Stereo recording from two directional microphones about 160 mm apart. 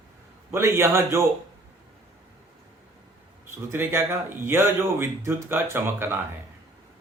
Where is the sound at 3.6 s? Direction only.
15° right (ahead or behind).